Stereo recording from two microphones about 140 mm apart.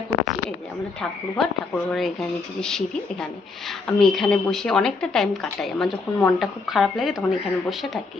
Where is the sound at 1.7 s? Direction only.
5° left (ahead or behind).